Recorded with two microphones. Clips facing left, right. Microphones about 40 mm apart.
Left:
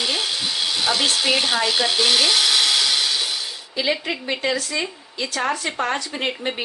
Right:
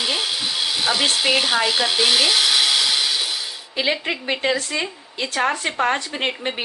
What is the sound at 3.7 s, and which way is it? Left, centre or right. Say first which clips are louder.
Speech: right 1 dB; right.